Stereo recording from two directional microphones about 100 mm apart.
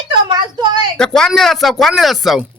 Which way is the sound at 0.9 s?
5° left (ahead or behind).